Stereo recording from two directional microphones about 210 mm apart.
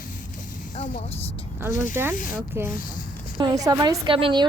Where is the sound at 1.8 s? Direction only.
10° right (ahead or behind).